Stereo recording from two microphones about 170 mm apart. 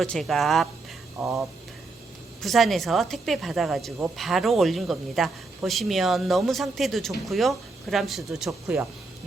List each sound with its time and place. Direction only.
0.0 s speech: centre (ahead or behind)
1.2 s speech: 15° right (ahead or behind)
2.4 s speech: centre (ahead or behind)